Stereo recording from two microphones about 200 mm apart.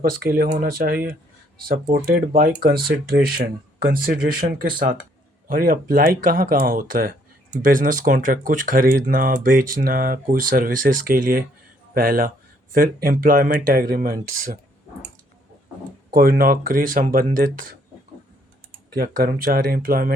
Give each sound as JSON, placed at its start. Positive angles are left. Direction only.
{"t": 0.0, "sound": "speech", "side_deg": -45}
{"t": 16.1, "sound": "speech", "side_deg": -45}
{"t": 18.9, "sound": "speech", "side_deg": -45}